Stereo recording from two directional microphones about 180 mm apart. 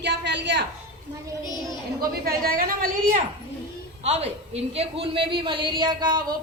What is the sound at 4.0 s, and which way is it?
A woman's voice, 35° right (ahead or behind).